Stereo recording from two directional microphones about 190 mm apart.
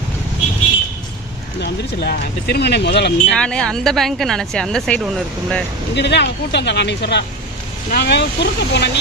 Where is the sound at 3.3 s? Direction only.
5° left (ahead or behind).